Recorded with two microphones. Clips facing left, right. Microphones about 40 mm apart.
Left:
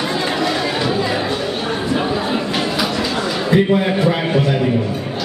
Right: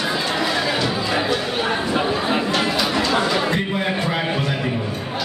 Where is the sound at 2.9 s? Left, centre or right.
Centre.